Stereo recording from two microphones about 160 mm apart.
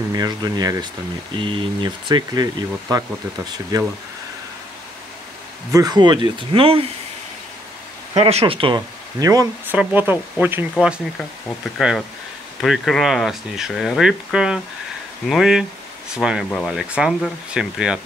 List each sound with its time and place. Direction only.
0.1 s speech: 25° right (ahead or behind)
5.7 s speech: 25° right (ahead or behind)
8.2 s speech: 40° right (ahead or behind); by 9.5 s 20° right (ahead or behind)
9.7 s speech: 10° right (ahead or behind)